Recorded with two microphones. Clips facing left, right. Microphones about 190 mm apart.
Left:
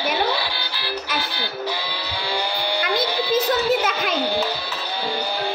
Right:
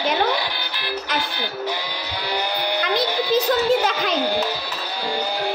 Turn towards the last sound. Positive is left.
turn(degrees=5)  # may be behind; listen again after turning